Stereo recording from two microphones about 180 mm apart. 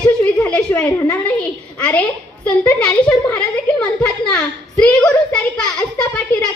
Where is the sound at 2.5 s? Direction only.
5° left (ahead or behind).